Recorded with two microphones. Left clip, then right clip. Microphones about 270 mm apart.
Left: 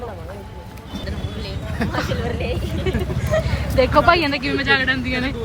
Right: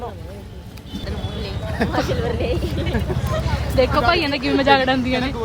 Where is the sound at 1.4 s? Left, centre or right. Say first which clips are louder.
Right 3 dB; right.